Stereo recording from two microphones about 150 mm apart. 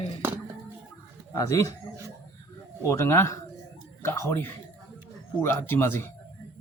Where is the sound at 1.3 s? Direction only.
20° left (ahead or behind).